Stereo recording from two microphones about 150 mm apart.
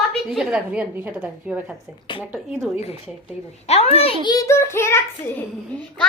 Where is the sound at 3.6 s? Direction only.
45° left (ahead or behind).